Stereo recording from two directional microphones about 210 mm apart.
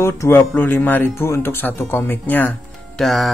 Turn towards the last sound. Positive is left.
turn(degrees=0)  # may be behind; listen again after turning